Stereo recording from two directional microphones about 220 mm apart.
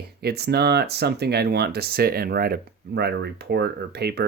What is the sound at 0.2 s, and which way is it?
Speech, 45° right (ahead or behind).